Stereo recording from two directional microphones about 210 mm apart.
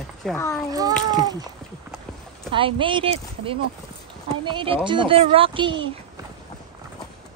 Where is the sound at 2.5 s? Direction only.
25° right (ahead or behind).